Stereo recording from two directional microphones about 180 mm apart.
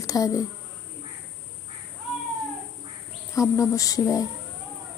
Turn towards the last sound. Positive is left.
turn(degrees=20)  # may be behind; listen again after turning